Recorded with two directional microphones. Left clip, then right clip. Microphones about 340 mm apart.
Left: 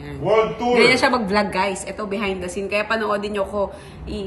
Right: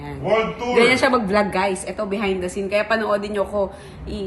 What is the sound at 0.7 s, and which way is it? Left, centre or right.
A woman's voice, centre.